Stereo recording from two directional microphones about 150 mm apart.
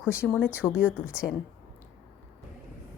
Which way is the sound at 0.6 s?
10° left (ahead or behind).